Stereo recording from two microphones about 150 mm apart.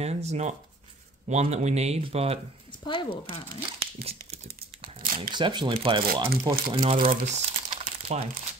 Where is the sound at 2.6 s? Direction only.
30° left (ahead or behind).